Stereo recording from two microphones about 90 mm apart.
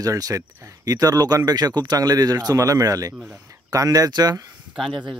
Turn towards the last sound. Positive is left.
turn(degrees=0)  # may be behind; listen again after turning